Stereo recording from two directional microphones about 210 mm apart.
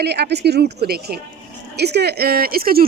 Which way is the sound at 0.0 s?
50° right (ahead or behind).